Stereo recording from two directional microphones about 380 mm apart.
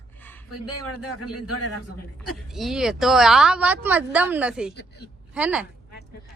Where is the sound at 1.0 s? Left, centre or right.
Centre.